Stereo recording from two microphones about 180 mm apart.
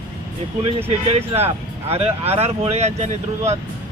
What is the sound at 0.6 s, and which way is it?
Speech, 35° right (ahead or behind).